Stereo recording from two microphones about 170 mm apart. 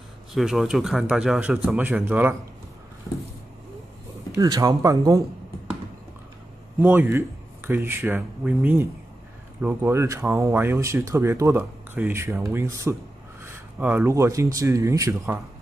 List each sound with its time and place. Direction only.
0.3 s speech: centre (ahead or behind)
4.4 s speech: 20° right (ahead or behind)
6.8 s speech: 10° right (ahead or behind)